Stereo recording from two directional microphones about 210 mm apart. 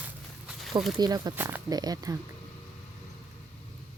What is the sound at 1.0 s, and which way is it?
Speech, 20° right (ahead or behind).